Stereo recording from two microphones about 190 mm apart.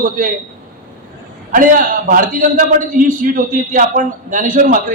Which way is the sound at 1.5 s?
45° right (ahead or behind).